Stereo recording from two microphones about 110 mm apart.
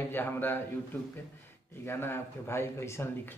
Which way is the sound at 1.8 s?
20° left (ahead or behind).